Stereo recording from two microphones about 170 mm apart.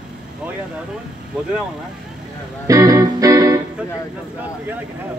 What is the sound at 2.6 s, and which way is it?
Music, 20° right (ahead or behind).